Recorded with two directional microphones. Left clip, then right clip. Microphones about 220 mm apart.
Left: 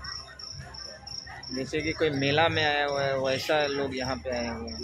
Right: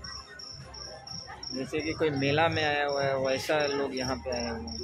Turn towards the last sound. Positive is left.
turn(degrees=20)  # may be behind; listen again after turning